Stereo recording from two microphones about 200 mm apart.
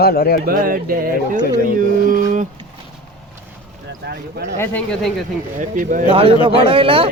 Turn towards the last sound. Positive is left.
turn(degrees=-25)  # may be behind; listen again after turning